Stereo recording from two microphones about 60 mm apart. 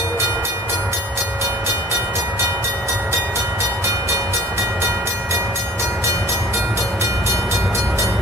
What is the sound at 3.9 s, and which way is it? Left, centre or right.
Train, right.